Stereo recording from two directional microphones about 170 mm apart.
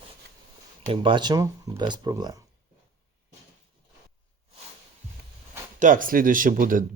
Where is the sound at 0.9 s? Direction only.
25° right (ahead or behind).